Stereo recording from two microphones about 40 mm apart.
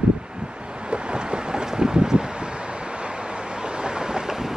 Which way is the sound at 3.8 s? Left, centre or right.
Right.